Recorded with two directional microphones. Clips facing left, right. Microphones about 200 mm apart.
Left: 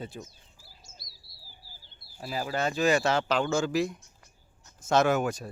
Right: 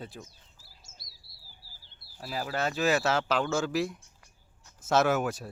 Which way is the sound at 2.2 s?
Centre (ahead or behind).